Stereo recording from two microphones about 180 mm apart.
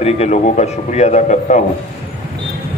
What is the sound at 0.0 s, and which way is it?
A man's voice, 40° left (ahead or behind).